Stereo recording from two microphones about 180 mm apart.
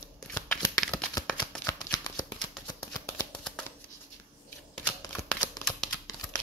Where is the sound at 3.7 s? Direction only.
10° left (ahead or behind).